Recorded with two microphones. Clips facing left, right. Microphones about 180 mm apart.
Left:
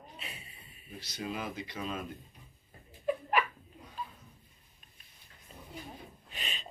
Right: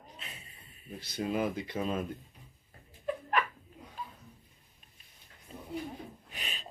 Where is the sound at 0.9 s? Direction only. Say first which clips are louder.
Right 6 dB; 50° right (ahead or behind).